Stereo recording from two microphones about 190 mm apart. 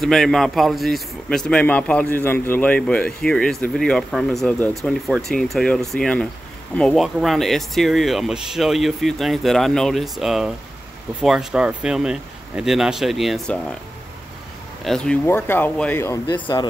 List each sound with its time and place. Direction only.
0.0 s speech: centre (ahead or behind)
14.9 s speech: 5° left (ahead or behind)
16.3 s speech: 25° left (ahead or behind)